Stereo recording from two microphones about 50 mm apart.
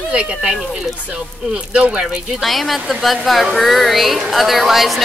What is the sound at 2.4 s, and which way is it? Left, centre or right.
Speech, centre.